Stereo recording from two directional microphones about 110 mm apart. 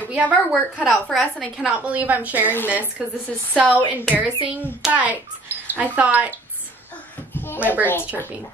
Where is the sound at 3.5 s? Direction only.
15° right (ahead or behind).